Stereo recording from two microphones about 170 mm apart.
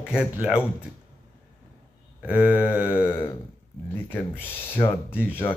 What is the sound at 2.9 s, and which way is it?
Speech, 15° left (ahead or behind).